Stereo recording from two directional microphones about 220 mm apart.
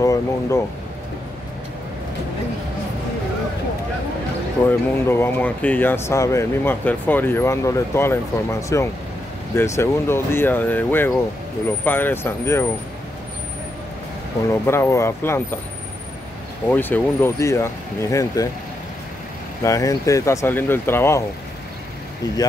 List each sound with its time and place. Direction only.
0.0 s speech: 15° left (ahead or behind)
4.6 s speech: 10° left (ahead or behind)
14.5 s speech: 10° left (ahead or behind)
16.7 s speech: 10° left (ahead or behind)
19.6 s speech: 15° left (ahead or behind)